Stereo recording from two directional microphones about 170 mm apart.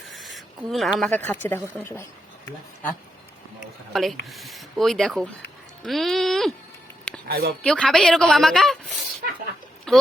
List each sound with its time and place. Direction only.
0.1 s a sound: centre (ahead or behind)
1.1 s speech: 10° left (ahead or behind)
3.9 s a woman's voice: centre (ahead or behind)
7.3 s speech: 65° right (ahead or behind)
7.6 s a woman's voice: 5° left (ahead or behind)
9.9 s speech: centre (ahead or behind)